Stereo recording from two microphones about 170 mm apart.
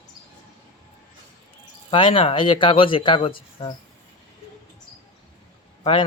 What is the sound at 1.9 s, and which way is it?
Speech, 30° left (ahead or behind).